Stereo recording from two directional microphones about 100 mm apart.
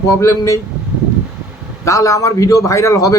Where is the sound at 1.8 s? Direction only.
30° left (ahead or behind).